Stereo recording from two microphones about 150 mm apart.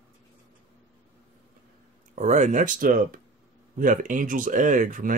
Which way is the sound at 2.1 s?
50° right (ahead or behind).